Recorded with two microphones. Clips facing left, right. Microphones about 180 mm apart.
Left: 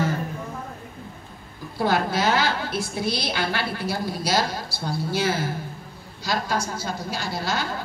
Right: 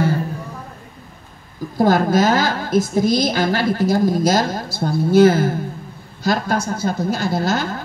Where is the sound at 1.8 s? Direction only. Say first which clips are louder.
Right 8 dB; 45° right (ahead or behind).